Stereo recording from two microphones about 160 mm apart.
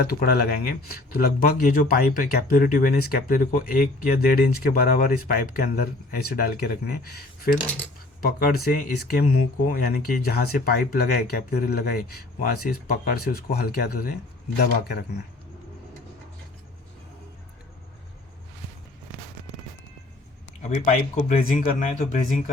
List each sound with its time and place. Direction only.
0.0 s speech: 75° left (ahead or behind)
14.6 s speech: 80° left
20.6 s speech: 50° left (ahead or behind)